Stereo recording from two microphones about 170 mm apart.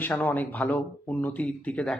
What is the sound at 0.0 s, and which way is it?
Speech, 10° left (ahead or behind).